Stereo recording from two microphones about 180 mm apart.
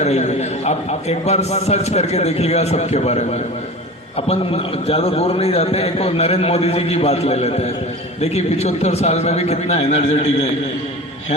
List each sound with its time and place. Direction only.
0.0 s a man's voice: 40° left (ahead or behind)
4.3 s a man's voice: 35° left (ahead or behind)